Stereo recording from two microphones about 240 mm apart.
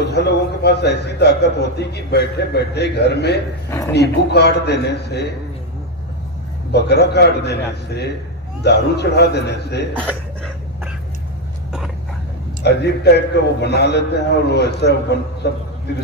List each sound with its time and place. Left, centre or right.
0.0 s a man's voice: left
6.7 s a man's voice: left
10.0 s a sound: centre
12.6 s a man's voice: left